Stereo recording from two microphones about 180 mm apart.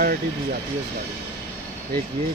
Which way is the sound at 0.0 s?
55° right (ahead or behind).